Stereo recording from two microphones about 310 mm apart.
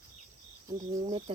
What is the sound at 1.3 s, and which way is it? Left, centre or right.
Speech, centre.